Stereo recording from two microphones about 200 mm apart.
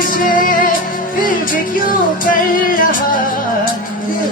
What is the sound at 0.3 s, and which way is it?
Music, 45° left (ahead or behind).